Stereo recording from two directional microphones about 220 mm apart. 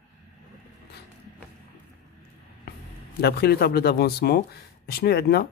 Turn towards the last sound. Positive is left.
turn(degrees=45)  # may be behind; listen again after turning